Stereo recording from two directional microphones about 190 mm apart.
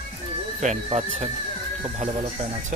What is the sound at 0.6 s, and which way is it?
Speech, 35° right (ahead or behind).